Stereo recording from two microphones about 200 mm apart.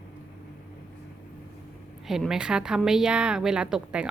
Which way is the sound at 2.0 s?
Centre (ahead or behind).